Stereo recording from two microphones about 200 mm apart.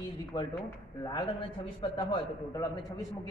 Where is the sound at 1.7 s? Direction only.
20° left (ahead or behind).